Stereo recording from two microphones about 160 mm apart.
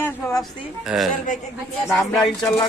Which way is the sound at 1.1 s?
55° left (ahead or behind).